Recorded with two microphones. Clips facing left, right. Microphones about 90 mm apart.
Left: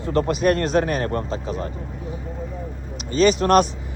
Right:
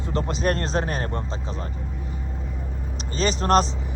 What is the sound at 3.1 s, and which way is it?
Speech, 35° right (ahead or behind).